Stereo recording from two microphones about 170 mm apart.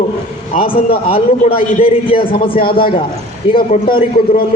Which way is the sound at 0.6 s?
30° left (ahead or behind).